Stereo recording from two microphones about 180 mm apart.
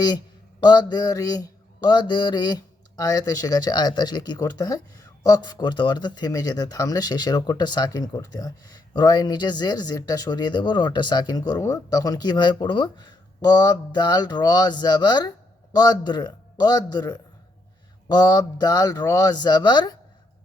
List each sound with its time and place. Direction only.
0.6 s speech: 25° left (ahead or behind)